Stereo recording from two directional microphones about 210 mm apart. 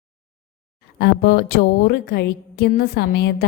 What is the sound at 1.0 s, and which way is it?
A woman's voice, 50° left (ahead or behind).